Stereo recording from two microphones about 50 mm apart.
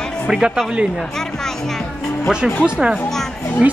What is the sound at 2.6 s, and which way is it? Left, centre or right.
Speech, centre.